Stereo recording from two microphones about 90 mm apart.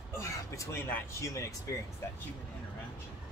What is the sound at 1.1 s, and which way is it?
Speech, 35° left (ahead or behind).